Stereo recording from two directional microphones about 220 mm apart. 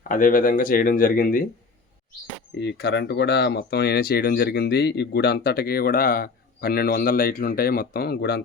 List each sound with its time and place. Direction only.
0.1 s speech: 40° left (ahead or behind)
2.6 s speech: 50° left (ahead or behind)